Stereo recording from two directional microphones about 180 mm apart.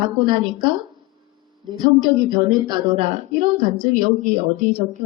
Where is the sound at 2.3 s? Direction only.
25° right (ahead or behind).